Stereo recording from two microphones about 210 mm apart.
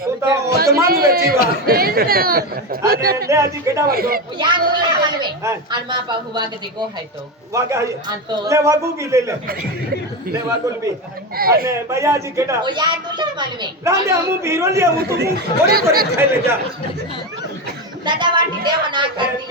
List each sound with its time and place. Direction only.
0.2 s speech: 15° right (ahead or behind)
0.6 s speech: 45° right (ahead or behind)
3.2 s speech: 15° right (ahead or behind)
3.8 s speech: 45° right (ahead or behind)
4.4 s speech: 20° right (ahead or behind)
11.3 s speech: 45° right (ahead or behind)
11.6 s speech: 15° right (ahead or behind)
14.9 s speech: 50° right (ahead or behind)
18.0 s speech: 20° right (ahead or behind)